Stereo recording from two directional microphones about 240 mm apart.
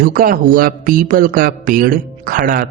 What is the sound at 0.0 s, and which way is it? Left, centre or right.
Speech, right.